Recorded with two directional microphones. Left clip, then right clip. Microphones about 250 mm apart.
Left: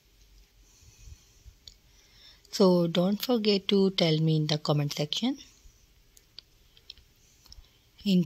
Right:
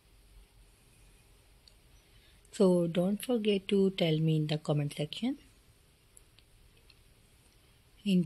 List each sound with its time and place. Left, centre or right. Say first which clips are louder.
2.5 s speech: left 4 dB; left